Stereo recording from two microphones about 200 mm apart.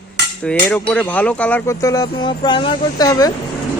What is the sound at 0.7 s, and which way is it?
Speech, 5° left (ahead or behind).